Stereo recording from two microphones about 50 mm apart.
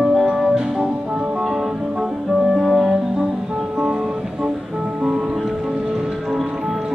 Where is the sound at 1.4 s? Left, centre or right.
Centre.